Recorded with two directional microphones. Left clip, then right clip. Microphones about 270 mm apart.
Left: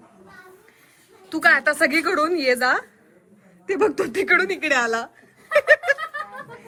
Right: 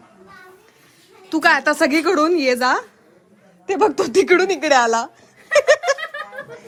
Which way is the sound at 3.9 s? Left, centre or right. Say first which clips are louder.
Right 4 dB; centre.